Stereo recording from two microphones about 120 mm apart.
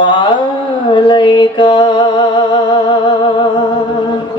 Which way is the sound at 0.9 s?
40° left (ahead or behind).